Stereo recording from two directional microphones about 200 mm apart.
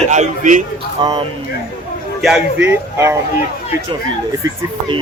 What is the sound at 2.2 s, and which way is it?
Speech, 5° right (ahead or behind).